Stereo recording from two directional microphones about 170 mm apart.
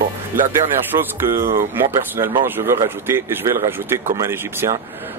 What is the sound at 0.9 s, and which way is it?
Speech, 15° right (ahead or behind).